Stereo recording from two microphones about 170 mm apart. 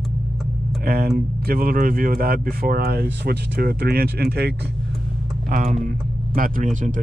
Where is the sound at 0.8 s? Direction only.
60° right (ahead or behind).